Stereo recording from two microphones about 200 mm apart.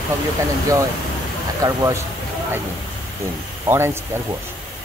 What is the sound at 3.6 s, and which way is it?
Speech, 10° right (ahead or behind).